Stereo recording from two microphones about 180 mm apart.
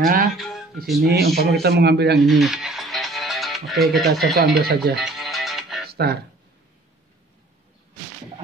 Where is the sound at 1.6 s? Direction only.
65° right (ahead or behind).